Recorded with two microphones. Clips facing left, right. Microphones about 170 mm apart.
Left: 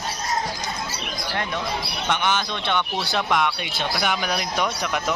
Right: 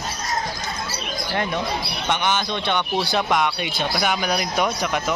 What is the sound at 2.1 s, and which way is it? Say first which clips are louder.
Speech: right 1 dB; centre (ahead or behind).